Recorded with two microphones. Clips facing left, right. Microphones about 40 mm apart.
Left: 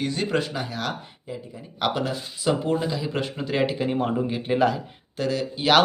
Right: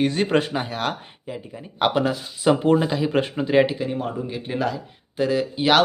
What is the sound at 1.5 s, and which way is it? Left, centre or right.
Speech, right.